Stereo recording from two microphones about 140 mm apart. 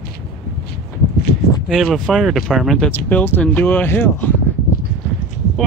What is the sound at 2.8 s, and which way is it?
Speech, 10° left (ahead or behind).